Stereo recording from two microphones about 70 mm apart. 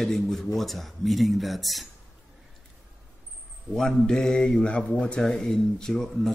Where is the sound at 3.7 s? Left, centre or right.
Centre.